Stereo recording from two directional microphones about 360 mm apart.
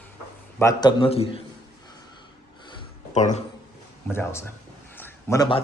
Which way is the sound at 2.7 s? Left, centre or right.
Centre.